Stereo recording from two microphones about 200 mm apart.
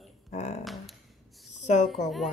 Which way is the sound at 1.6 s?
35° left (ahead or behind).